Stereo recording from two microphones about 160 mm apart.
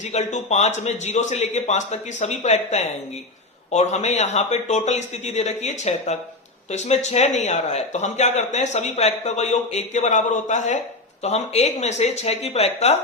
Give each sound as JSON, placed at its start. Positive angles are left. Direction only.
{"t": 0.0, "sound": "a man's voice", "side_deg": 45}